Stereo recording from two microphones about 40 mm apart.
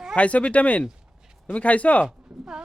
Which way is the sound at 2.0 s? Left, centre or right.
Centre.